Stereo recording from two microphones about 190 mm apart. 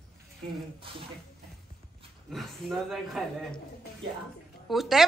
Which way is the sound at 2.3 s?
Centre (ahead or behind).